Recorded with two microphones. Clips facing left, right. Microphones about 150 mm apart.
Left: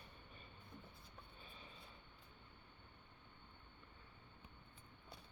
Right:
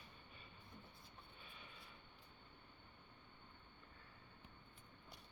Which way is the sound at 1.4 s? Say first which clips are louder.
Left 1 dB; 35° left (ahead or behind).